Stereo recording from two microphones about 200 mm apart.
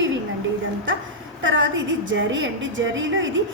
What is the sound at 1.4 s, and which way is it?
A woman's voice, 65° right (ahead or behind).